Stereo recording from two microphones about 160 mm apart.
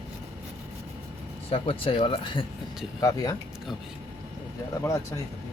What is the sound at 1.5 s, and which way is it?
Speech, 35° left (ahead or behind).